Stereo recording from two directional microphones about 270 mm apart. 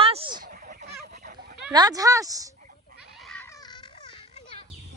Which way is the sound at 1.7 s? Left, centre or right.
Centre.